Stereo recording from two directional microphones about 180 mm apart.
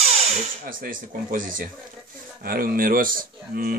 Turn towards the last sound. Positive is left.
turn(degrees=-50)  # may be behind; listen again after turning